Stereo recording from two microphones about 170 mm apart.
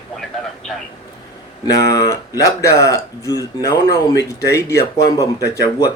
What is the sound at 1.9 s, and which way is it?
Speech, 20° left (ahead or behind).